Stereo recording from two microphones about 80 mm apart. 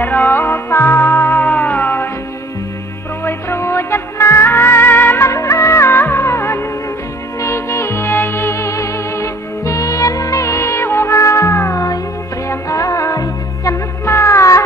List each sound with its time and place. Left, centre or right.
0.0 s music: left
3.3 s music: left
5.3 s music of bollywood: left
7.3 s music: left
14.0 s music: left